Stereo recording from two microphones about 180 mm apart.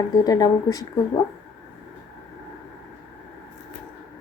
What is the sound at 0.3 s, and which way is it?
Speech, 20° left (ahead or behind).